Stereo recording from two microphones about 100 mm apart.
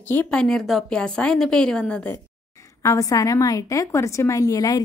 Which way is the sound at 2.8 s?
35° left (ahead or behind).